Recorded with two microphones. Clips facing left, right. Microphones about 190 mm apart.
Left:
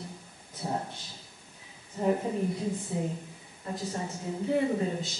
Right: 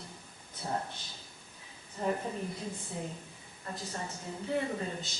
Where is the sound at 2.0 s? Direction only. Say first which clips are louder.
Left 5 dB; 15° left (ahead or behind).